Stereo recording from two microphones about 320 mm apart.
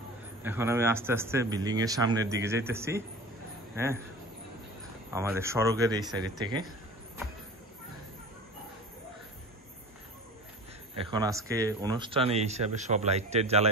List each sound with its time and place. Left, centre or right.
0.4 s a man's voice: centre
5.1 s a man's voice: centre
11.0 s speech: centre